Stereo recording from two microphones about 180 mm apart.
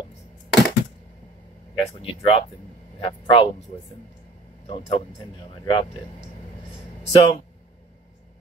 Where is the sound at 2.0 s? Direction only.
30° left (ahead or behind).